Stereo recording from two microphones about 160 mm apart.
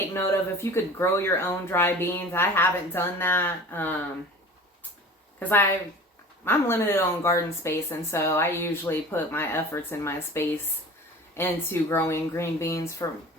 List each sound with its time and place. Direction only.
0.1 s a woman's voice: 15° left (ahead or behind)
5.4 s a woman's voice: 10° left (ahead or behind)